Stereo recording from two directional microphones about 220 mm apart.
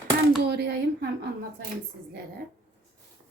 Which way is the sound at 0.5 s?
45° right (ahead or behind).